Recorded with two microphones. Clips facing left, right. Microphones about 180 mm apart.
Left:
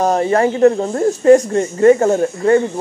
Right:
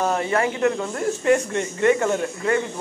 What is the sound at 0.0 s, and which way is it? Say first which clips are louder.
Speech: left 7 dB; 40° left (ahead or behind).